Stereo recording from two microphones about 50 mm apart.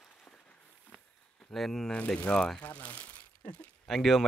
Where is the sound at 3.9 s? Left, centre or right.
Centre.